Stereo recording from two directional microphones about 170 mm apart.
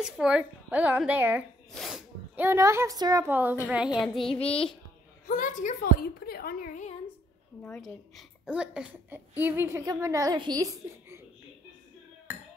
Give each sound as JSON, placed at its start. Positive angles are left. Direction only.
{"t": 0.0, "sound": "a woman's voice", "side_deg": -5}
{"t": 1.7, "sound": "sneeze", "side_deg": 0}
{"t": 2.4, "sound": "a woman's voice", "side_deg": -15}
{"t": 4.2, "sound": "child singing", "side_deg": 35}
{"t": 5.3, "sound": "a woman's voice", "side_deg": 50}
{"t": 7.6, "sound": "a woman's voice", "side_deg": 5}